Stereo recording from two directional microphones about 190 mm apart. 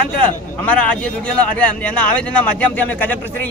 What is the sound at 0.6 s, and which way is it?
A man's voice, 5° left (ahead or behind).